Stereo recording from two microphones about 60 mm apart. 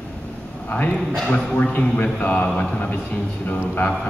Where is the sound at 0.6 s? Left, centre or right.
Left.